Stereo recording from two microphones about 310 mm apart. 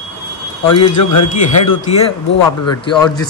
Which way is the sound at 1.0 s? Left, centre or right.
Left.